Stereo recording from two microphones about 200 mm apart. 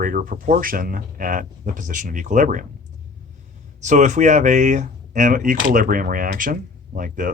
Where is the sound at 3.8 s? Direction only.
35° right (ahead or behind).